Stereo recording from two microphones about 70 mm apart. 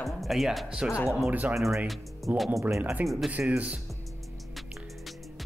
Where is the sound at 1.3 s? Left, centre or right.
Right.